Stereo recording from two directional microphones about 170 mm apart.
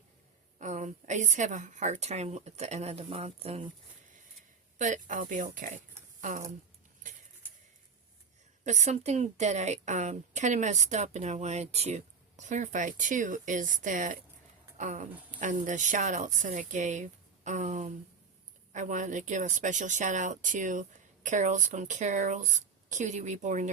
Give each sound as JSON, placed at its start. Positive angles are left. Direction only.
{"t": 0.6, "sound": "a woman's voice", "side_deg": -45}
{"t": 4.8, "sound": "a woman's voice", "side_deg": -45}
{"t": 8.6, "sound": "a woman's voice", "side_deg": -45}
{"t": 14.8, "sound": "a sound", "side_deg": -45}
{"t": 15.4, "sound": "a woman's voice", "side_deg": -50}